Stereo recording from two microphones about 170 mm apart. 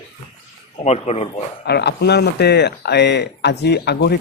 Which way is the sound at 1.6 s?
75° left (ahead or behind).